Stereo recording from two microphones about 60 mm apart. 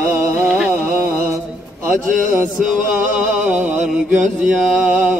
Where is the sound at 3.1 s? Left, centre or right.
Right.